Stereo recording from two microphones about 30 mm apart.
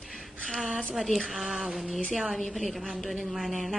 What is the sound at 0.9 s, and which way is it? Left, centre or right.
Speech, centre.